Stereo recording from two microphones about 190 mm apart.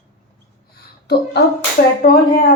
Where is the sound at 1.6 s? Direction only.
45° left (ahead or behind).